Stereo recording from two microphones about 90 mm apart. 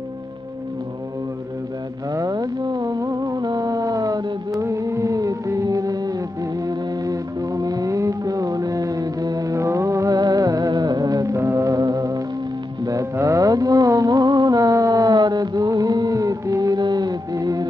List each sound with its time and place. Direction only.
2.1 s music: 45° right (ahead or behind)
12.8 s mantra: 35° right (ahead or behind)
15.1 s music: 50° right (ahead or behind)